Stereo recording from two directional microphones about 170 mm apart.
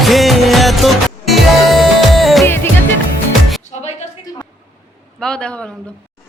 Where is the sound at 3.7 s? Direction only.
40° left (ahead or behind).